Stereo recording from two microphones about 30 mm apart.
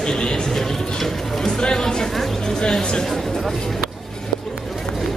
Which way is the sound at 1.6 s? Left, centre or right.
Left.